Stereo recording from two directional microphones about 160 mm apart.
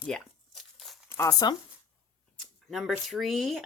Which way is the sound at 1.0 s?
20° left (ahead or behind).